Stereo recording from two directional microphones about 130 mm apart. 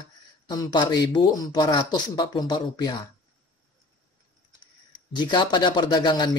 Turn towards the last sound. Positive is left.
turn(degrees=35)  # may be behind; listen again after turning